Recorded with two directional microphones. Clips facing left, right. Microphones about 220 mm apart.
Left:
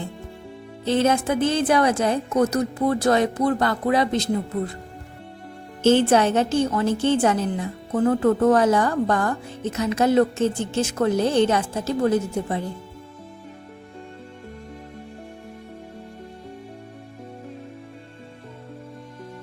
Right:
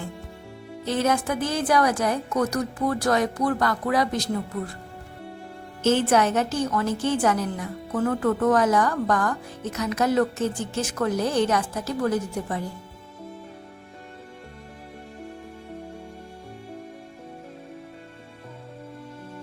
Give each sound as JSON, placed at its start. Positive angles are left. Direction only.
{"t": 0.9, "sound": "a woman's voice", "side_deg": 25}
{"t": 5.8, "sound": "a woman's voice", "side_deg": 30}